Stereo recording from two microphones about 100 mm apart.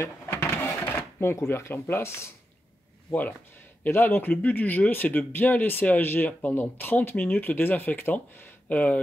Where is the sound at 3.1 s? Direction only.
15° left (ahead or behind).